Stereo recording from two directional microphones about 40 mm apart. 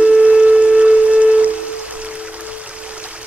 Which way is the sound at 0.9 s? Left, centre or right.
Right.